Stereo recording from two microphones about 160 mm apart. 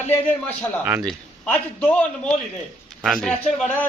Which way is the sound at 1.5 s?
10° left (ahead or behind).